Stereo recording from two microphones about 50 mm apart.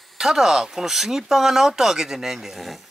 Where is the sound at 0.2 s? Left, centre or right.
Centre.